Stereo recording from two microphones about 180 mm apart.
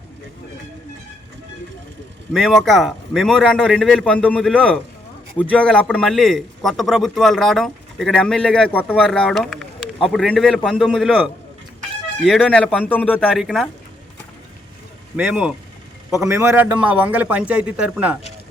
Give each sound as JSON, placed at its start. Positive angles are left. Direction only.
{"t": 2.3, "sound": "a man's voice", "side_deg": 0}
{"t": 15.1, "sound": "a man's voice", "side_deg": -5}